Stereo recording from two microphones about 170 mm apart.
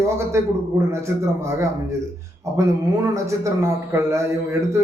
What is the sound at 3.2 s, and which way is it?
A man's voice, 15° right (ahead or behind).